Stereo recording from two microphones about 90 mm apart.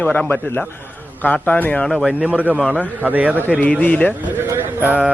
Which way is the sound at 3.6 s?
15° left (ahead or behind).